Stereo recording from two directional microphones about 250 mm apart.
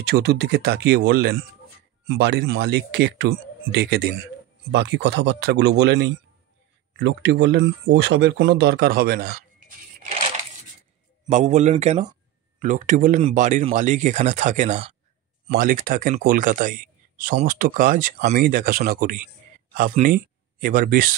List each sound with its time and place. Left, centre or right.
0.0 s speech: right
11.2 s speech: right